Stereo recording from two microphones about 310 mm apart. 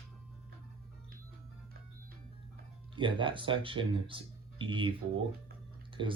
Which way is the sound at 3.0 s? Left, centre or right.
Centre.